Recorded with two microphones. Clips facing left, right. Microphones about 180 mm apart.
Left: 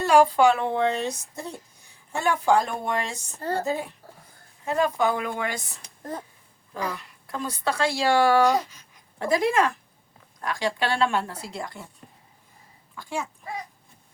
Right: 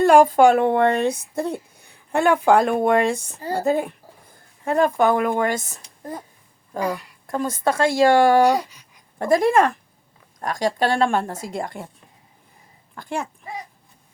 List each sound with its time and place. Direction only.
0.0 s speech: 50° right (ahead or behind)
6.8 s speech: 45° right (ahead or behind)
8.4 s a sound: 15° right (ahead or behind)
9.1 s speech: 50° right (ahead or behind)
13.0 s speech: 60° right (ahead or behind)